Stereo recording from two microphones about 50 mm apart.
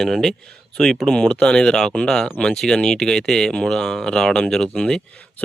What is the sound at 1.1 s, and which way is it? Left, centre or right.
Speech, centre.